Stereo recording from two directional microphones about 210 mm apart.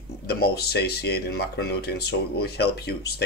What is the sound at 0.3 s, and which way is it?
Speech, 50° left (ahead or behind).